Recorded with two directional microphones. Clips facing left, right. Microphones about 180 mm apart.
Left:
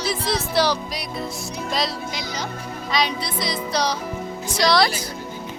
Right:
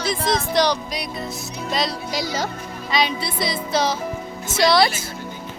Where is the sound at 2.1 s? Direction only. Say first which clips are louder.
Right 5 dB; 45° right (ahead or behind).